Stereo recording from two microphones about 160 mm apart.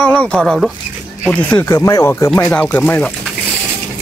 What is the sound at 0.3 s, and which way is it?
Speech, 5° left (ahead or behind).